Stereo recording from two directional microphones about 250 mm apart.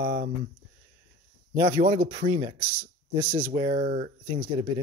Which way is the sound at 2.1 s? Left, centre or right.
Centre.